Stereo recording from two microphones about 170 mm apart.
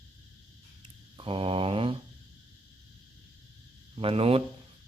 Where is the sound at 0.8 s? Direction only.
30° right (ahead or behind).